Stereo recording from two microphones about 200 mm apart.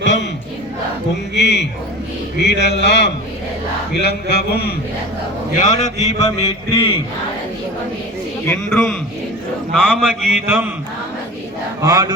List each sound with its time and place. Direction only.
0.0 s battle cry: 65° left (ahead or behind)
1.4 s speech: 60° left (ahead or behind)
4.0 s a sound: 55° left (ahead or behind)
5.5 s a man's voice: 40° left (ahead or behind)
8.4 s a man's voice: 10° left (ahead or behind)
10.0 s a man's voice: 10° right (ahead or behind)
11.8 s a man's voice: 20° right (ahead or behind)